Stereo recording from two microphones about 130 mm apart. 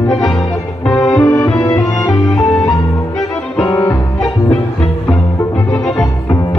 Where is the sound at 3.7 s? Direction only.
25° left (ahead or behind).